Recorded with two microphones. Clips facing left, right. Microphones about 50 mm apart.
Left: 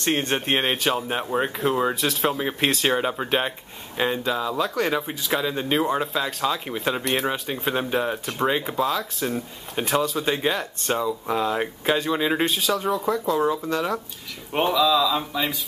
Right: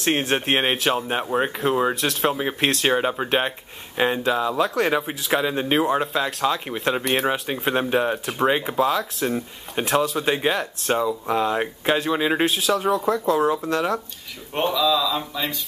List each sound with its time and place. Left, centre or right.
0.0 s speech: centre
5.4 s speech: centre
5.8 s speech: centre
12.4 s speech: centre